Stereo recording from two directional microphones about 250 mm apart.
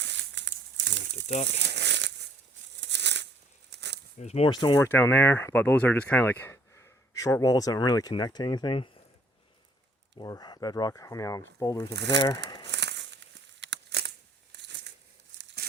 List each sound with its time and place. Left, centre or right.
0.0 s crumpling: right
2.8 s a sound: right
4.2 s speech: left
10.2 s speech: centre
11.9 s speech: right
12.6 s crumpling: right